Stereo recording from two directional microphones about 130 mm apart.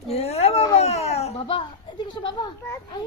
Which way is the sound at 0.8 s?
55° left (ahead or behind).